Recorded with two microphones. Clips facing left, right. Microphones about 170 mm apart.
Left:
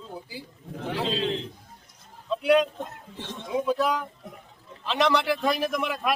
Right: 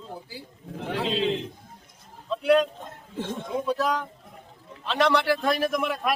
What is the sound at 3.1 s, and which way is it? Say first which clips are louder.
Speech: right 9 dB; 50° right (ahead or behind).